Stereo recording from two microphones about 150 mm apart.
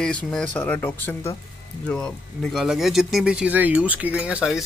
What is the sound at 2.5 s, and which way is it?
Speech, centre (ahead or behind).